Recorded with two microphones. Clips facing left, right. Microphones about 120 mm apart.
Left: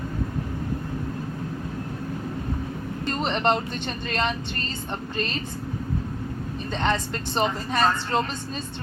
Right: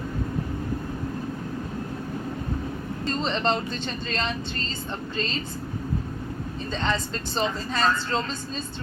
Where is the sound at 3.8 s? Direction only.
60° left (ahead or behind).